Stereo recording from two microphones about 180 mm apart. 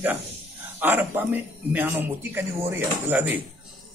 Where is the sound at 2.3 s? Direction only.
10° right (ahead or behind).